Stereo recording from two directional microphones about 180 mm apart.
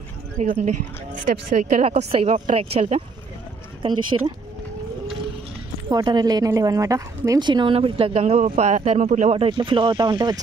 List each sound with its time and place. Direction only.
0.4 s speech: 45° right (ahead or behind)
4.1 s a woman's voice: 25° right (ahead or behind)
5.9 s a woman's voice: 25° right (ahead or behind)